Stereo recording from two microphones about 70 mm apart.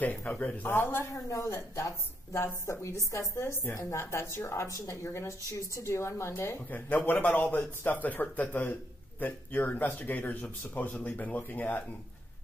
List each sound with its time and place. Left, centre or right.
0.0 s speech: centre
0.7 s a woman's voice: left
1.1 s a woman's voice: left
6.9 s speech: left